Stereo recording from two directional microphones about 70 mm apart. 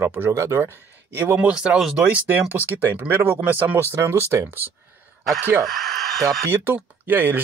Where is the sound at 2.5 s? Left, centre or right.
Right.